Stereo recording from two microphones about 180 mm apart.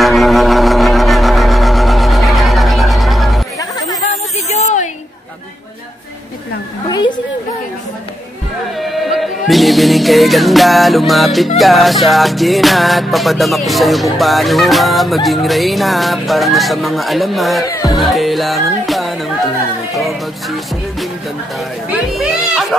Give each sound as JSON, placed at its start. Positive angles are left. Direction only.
{"t": 0.0, "sound": "music", "side_deg": 0}
{"t": 4.5, "sound": "a sound", "side_deg": 40}
{"t": 8.7, "sound": "music", "side_deg": 0}
{"t": 17.6, "sound": "music", "side_deg": 20}
{"t": 17.9, "sound": "music", "side_deg": 0}
{"t": 22.1, "sound": "a sound", "side_deg": -5}